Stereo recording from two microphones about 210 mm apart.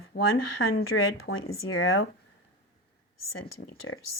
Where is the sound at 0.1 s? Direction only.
45° left (ahead or behind).